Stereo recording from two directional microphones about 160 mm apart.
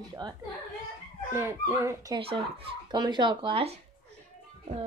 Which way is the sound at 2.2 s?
35° right (ahead or behind).